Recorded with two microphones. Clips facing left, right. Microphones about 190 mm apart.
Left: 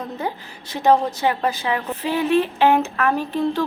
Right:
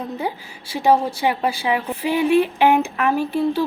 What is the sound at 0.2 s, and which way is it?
A woman's voice, 10° right (ahead or behind).